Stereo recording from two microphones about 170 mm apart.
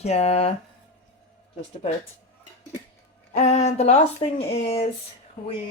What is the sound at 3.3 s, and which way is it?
Speech, 40° left (ahead or behind).